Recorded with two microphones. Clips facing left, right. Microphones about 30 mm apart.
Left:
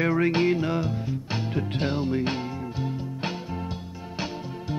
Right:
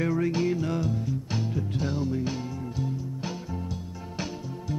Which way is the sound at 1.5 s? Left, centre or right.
Left.